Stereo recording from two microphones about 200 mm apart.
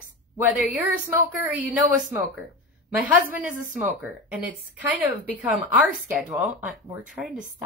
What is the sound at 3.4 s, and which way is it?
Speech, 40° right (ahead or behind).